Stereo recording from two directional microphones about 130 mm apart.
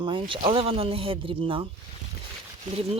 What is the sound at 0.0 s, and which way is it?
Speech, 40° right (ahead or behind).